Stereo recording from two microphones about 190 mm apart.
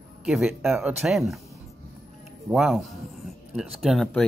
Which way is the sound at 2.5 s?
Centre (ahead or behind).